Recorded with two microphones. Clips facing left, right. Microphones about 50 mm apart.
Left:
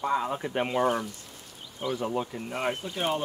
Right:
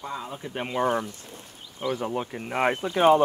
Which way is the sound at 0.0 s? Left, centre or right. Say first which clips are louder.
Left 7 dB; left.